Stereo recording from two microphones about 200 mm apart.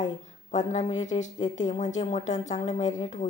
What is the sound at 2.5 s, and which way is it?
Speech, 25° left (ahead or behind).